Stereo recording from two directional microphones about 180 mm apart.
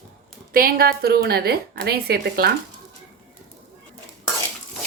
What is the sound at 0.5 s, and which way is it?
A woman's voice, 55° right (ahead or behind).